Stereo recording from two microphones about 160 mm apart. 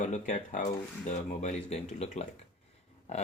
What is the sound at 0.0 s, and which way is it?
Speech, 50° left (ahead or behind).